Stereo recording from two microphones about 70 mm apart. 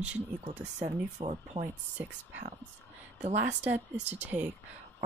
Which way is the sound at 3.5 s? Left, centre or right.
Right.